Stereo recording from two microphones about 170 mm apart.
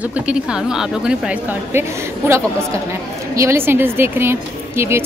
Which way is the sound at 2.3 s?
15° right (ahead or behind).